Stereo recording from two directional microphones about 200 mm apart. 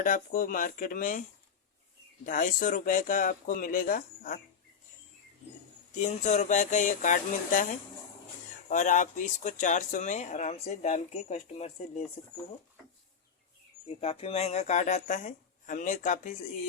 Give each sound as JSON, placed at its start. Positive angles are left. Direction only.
{"t": 0.0, "sound": "speech", "side_deg": 40}
{"t": 2.2, "sound": "speech", "side_deg": 40}
{"t": 5.9, "sound": "speech", "side_deg": 35}
{"t": 13.8, "sound": "speech", "side_deg": 30}